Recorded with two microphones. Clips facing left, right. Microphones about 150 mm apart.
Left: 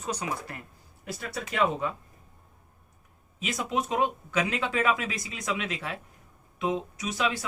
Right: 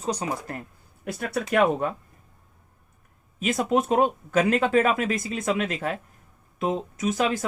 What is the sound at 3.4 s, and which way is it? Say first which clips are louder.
Speech: right 7 dB; 50° right (ahead or behind).